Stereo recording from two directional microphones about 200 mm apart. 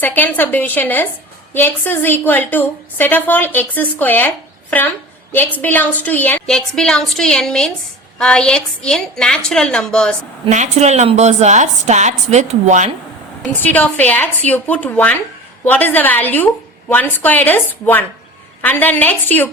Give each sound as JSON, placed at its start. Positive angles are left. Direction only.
{"t": 0.0, "sound": "a woman's voice", "side_deg": 10}
{"t": 10.4, "sound": "a woman's voice", "side_deg": -35}
{"t": 13.5, "sound": "a woman's voice", "side_deg": 10}